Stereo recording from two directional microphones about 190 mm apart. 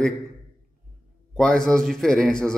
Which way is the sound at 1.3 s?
5° left (ahead or behind).